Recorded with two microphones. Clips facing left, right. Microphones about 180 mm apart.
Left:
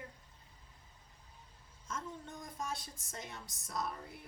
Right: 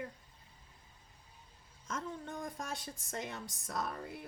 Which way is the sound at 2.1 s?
60° right (ahead or behind).